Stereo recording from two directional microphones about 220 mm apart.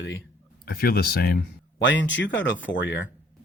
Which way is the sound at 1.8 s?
55° left (ahead or behind).